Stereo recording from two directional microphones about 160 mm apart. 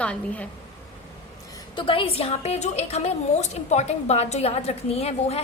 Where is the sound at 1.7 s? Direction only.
35° left (ahead or behind).